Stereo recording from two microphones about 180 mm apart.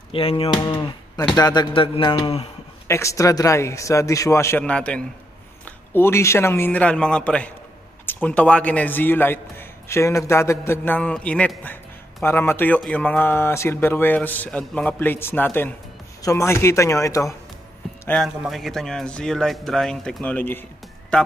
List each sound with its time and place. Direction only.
0.1 s speech: 30° left (ahead or behind)
2.9 s a man's voice: 15° left (ahead or behind)
18.0 s a man's voice: 5° left (ahead or behind)